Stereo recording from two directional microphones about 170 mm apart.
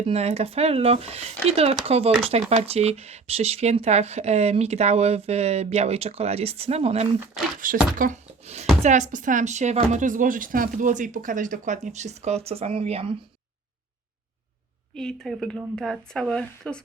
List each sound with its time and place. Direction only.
0.0 s speech: 40° right (ahead or behind)
7.5 s speech: 55° right (ahead or behind); by 13.1 s 35° right (ahead or behind)
14.9 s speech: 5° left (ahead or behind)